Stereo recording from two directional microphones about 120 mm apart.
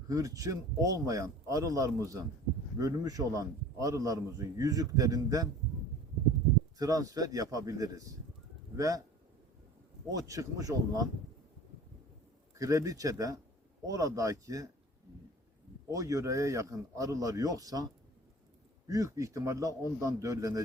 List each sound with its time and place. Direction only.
0.1 s a man's voice: 30° right (ahead or behind)
6.7 s a man's voice: 30° right (ahead or behind)
10.1 s a man's voice: 30° right (ahead or behind)
12.5 s a man's voice: 30° right (ahead or behind)
15.9 s a man's voice: 30° right (ahead or behind)
18.9 s a man's voice: 30° right (ahead or behind)